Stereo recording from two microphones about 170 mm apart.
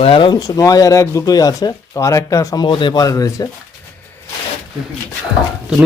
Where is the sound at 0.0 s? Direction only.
30° left (ahead or behind).